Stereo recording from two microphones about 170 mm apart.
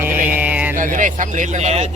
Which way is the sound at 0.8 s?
50° right (ahead or behind).